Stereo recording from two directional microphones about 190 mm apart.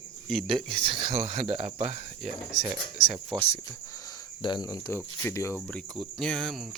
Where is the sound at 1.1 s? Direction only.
40° right (ahead or behind).